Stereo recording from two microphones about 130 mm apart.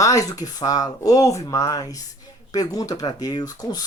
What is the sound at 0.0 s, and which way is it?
Speech, 25° left (ahead or behind).